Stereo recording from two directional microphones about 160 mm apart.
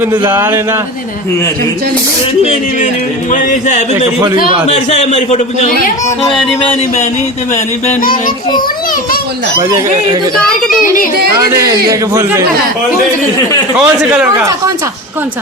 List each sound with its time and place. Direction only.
0.3 s speech: 15° right (ahead or behind)
3.3 s a man's voice: 50° left (ahead or behind)
7.5 s a man's voice: 45° left (ahead or behind)
9.6 s speech: 25° right (ahead or behind)
10.3 s a child's voice: 5° left (ahead or behind)
11.3 s speech: 20° right (ahead or behind)
13.7 s speech: 5° right (ahead or behind)